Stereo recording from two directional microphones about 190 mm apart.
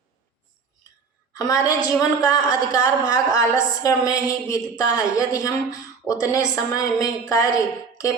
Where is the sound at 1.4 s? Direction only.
15° left (ahead or behind).